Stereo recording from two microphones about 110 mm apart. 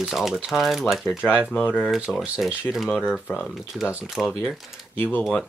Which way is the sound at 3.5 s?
Centre (ahead or behind).